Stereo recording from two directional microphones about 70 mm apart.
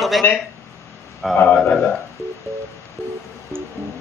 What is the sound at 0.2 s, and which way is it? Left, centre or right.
Speech, left.